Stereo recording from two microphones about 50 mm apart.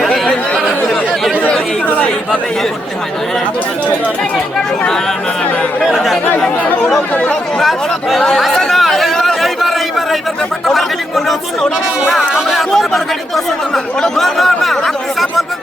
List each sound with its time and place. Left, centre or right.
0.1 s chatter: centre
1.5 s chatter: left
5.8 s speech: centre
7.6 s speech: centre
8.7 s chatter: centre
12.3 s speech: centre